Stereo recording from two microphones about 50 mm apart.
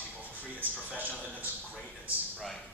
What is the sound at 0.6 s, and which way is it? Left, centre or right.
Speech, right.